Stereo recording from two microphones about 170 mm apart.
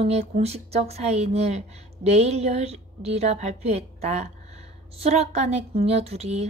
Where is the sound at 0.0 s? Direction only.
40° right (ahead or behind).